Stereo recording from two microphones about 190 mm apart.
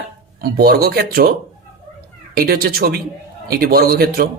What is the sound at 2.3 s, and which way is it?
Speech, 55° right (ahead or behind).